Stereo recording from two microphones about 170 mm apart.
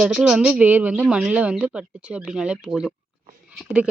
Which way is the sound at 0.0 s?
Centre (ahead or behind).